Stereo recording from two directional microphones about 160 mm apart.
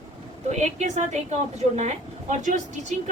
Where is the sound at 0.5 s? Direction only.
45° right (ahead or behind).